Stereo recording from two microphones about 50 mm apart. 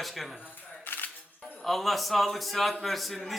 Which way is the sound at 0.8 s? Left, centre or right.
Left.